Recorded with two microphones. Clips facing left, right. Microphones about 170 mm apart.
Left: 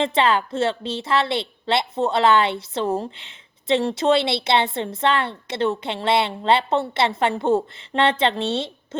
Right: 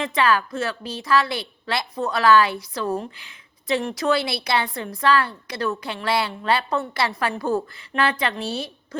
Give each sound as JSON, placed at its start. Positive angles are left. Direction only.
{"t": 0.0, "sound": "a woman's voice", "side_deg": 25}